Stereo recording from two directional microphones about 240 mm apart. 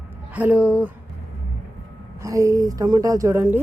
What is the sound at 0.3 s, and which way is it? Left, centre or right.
Speech, centre.